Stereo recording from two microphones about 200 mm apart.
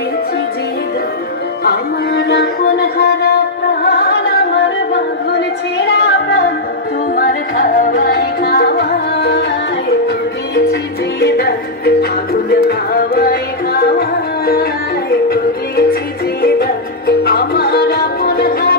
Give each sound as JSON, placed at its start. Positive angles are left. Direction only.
{"t": 1.6, "sound": "music", "side_deg": 55}
{"t": 4.6, "sound": "music", "side_deg": 60}
{"t": 7.2, "sound": "music", "side_deg": 45}
{"t": 10.5, "sound": "music", "side_deg": 55}